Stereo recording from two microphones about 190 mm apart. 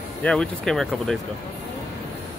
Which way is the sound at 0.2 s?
5° left (ahead or behind).